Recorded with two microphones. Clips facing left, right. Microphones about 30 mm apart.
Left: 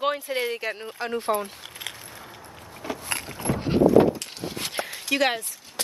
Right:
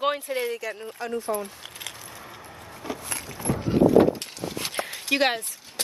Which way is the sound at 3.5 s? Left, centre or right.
Left.